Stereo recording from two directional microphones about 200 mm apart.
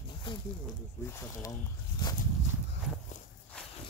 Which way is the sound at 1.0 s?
15° left (ahead or behind).